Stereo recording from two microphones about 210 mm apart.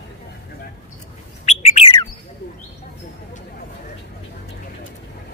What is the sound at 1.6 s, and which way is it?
Bird, 30° left (ahead or behind).